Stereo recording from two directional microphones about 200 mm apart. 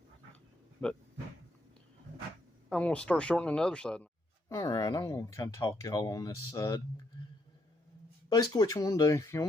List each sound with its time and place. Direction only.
0.8 s speech: 5° left (ahead or behind)
2.6 s speech: 5° left (ahead or behind)
4.4 s speech: 15° left (ahead or behind)
8.3 s speech: 20° left (ahead or behind)